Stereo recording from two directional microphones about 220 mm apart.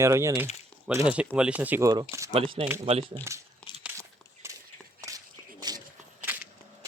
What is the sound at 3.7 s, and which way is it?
Crumpling, 20° left (ahead or behind).